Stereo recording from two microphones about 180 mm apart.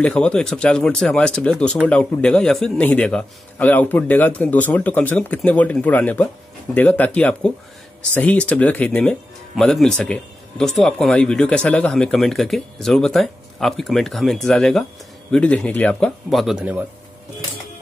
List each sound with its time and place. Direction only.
0.0 s speech: 5° left (ahead or behind)